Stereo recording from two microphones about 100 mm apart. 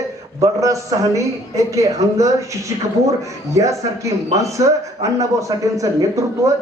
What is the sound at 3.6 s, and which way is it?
A man's voice, 35° right (ahead or behind).